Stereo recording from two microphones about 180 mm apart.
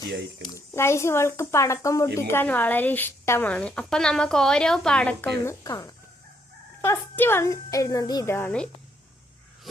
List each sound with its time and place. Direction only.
0.1 s speech: 70° right (ahead or behind)
0.7 s speech: 15° left (ahead or behind)
5.6 s chicken: 20° left (ahead or behind)
6.8 s speech: 15° left (ahead or behind)